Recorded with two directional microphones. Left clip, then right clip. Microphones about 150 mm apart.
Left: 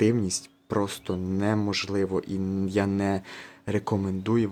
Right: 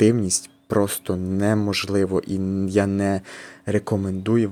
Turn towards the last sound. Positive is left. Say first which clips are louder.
# right 4 dB
turn(degrees=-15)  # may be behind; listen again after turning